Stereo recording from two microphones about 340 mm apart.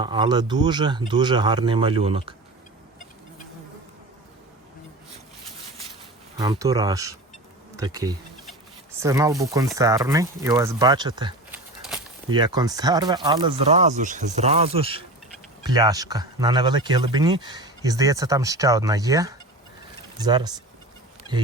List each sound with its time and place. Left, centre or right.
0.0 s speech: centre
6.3 s speech: centre